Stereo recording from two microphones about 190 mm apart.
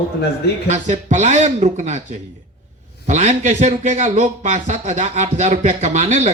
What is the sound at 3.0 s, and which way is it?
A man's voice, 35° right (ahead or behind).